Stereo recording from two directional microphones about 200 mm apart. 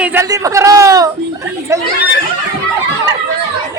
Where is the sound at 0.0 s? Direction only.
10° right (ahead or behind).